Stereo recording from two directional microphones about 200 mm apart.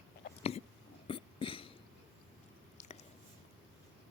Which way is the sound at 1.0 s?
25° left (ahead or behind).